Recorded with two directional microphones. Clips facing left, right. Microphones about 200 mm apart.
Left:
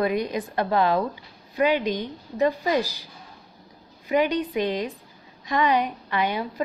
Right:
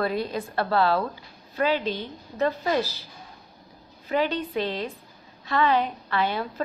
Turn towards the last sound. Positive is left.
turn(degrees=15)  # may be behind; listen again after turning